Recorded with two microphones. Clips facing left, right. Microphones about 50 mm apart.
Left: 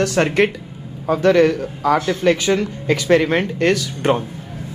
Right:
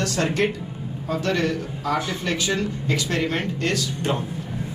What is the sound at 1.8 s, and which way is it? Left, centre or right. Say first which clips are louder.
Speech: left 9 dB; left.